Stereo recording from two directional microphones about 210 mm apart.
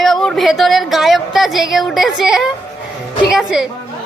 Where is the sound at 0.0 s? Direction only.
Centre (ahead or behind).